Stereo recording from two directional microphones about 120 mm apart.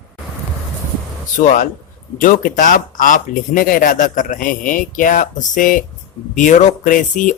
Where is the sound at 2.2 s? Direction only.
90° left.